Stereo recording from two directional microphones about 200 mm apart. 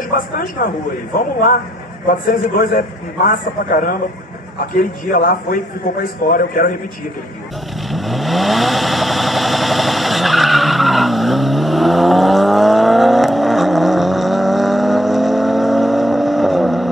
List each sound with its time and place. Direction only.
0.1 s a man's voice: 45° left (ahead or behind)
2.0 s a man's voice: 45° left (ahead or behind)
7.9 s vehicle: centre (ahead or behind)